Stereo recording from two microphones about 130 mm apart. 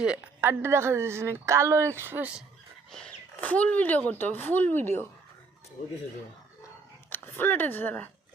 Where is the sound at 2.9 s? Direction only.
5° left (ahead or behind).